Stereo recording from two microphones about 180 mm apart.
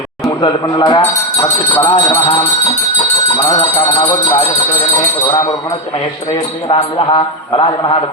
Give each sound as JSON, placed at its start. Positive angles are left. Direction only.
{"t": 0.3, "sound": "speech", "side_deg": 25}
{"t": 3.3, "sound": "speech", "side_deg": 20}
{"t": 6.7, "sound": "speech", "side_deg": 25}